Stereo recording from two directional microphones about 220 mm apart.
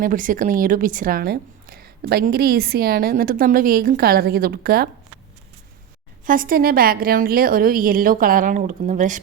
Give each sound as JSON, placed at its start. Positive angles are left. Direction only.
{"t": 0.0, "sound": "a woman's voice", "side_deg": -40}
{"t": 6.2, "sound": "a woman's voice", "side_deg": -40}